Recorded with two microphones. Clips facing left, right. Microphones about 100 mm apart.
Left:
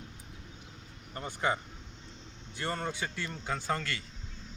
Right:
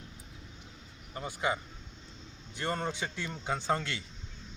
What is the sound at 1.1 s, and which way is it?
Speech, 10° right (ahead or behind).